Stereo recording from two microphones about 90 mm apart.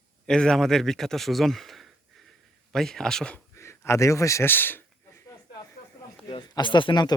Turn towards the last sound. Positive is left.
turn(degrees=55)  # may be behind; listen again after turning